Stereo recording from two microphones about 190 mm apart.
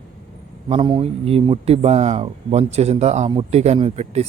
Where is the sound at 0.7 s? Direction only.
25° right (ahead or behind).